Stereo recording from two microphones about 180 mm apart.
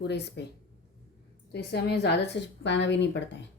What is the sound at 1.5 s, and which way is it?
A woman's voice, 65° left (ahead or behind).